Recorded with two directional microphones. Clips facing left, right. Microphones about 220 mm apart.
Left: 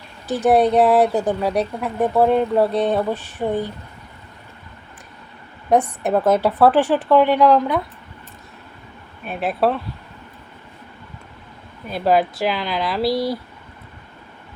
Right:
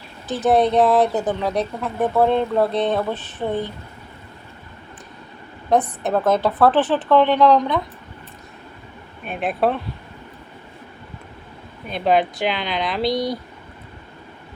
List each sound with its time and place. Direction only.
0.3 s speech: 15° left (ahead or behind)
5.7 s speech: 10° left (ahead or behind)
9.2 s speech: 5° left (ahead or behind)
11.9 s speech: 5° left (ahead or behind)